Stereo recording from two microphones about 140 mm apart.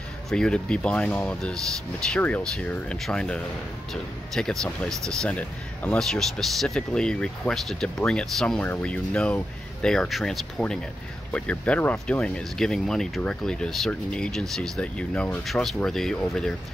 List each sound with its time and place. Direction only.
0.3 s speech: 5° left (ahead or behind)